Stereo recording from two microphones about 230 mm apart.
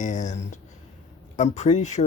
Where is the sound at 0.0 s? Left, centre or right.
Left.